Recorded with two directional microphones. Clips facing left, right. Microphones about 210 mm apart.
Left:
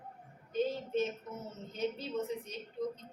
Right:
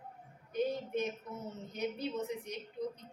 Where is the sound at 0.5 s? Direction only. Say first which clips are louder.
Left 1 dB; 15° right (ahead or behind).